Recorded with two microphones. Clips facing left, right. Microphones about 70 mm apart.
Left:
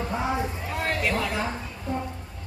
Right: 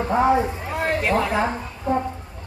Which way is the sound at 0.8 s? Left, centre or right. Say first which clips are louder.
Right 5 dB; right.